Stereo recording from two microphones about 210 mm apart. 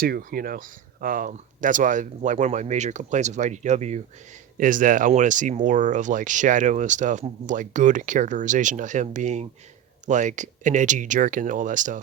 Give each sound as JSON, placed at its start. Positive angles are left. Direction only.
{"t": 0.0, "sound": "speech", "side_deg": -45}